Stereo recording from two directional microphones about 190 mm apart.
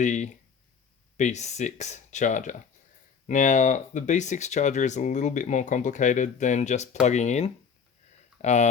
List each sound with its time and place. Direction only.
0.0 s speech: 40° left (ahead or behind)